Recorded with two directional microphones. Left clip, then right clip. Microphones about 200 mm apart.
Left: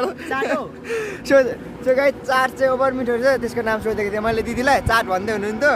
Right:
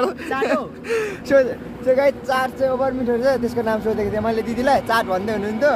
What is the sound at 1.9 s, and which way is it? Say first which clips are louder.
Speech: even; 10° left (ahead or behind).